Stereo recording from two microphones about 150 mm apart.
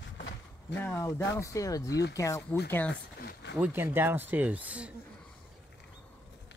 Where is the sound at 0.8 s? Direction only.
15° left (ahead or behind).